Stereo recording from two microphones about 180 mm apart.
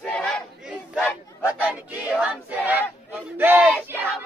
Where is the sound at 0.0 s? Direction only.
5° left (ahead or behind).